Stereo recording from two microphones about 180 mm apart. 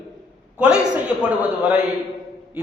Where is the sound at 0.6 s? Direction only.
5° right (ahead or behind).